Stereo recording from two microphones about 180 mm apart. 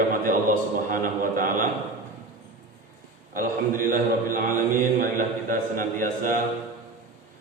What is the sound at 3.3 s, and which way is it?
Speech, 50° right (ahead or behind).